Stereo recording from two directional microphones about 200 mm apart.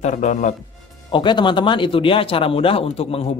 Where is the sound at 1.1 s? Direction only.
25° left (ahead or behind).